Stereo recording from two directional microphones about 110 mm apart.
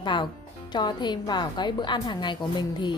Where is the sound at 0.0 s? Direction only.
45° left (ahead or behind).